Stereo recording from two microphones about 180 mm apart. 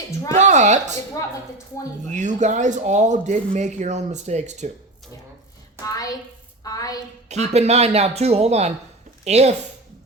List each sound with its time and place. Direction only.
0.3 s speech: 40° right (ahead or behind)
2.0 s speech: 40° right (ahead or behind)
5.8 s a woman's voice: 20° left (ahead or behind)
7.3 s speech: 40° right (ahead or behind)